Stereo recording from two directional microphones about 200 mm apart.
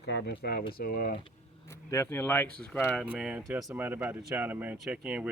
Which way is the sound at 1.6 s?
15° left (ahead or behind).